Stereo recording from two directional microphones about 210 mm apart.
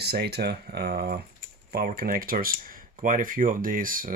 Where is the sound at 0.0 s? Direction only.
50° right (ahead or behind).